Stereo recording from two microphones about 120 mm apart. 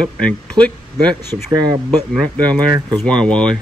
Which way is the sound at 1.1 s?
35° right (ahead or behind).